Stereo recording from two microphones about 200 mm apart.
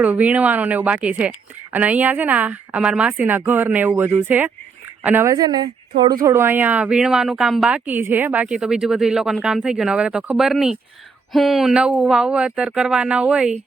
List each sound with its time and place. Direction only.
0.0 s a woman's voice: 10° right (ahead or behind)